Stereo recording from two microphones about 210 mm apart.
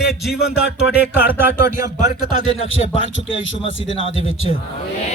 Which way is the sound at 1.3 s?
10° right (ahead or behind).